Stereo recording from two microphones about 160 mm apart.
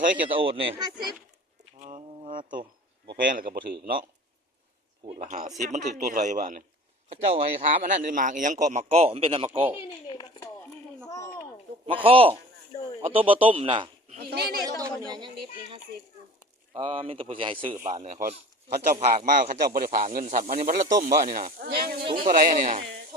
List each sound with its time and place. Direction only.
0.3 s speech: 35° right (ahead or behind)
1.8 s a sound: 45° right (ahead or behind)
3.1 s speech: 65° right (ahead or behind)
5.2 s a man's voice: 50° right (ahead or behind)
7.1 s a man's voice: 40° right (ahead or behind)
10.1 s a sound: 20° left (ahead or behind)
11.9 s speech: 35° right (ahead or behind)
14.3 s speech: 85° right
14.6 s a sound: 20° right (ahead or behind)
16.7 s speech: 30° right (ahead or behind)
18.0 s a man's voice: 50° right (ahead or behind)
21.7 s speech: 75° right (ahead or behind)
22.3 s speech: 55° right (ahead or behind)